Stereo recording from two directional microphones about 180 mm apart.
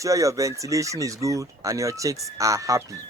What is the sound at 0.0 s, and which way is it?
Speech, 20° right (ahead or behind).